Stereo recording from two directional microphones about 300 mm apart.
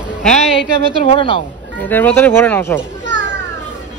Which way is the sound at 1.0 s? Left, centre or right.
Centre.